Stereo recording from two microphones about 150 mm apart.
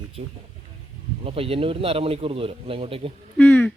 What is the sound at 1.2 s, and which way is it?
A man's voice, 40° right (ahead or behind).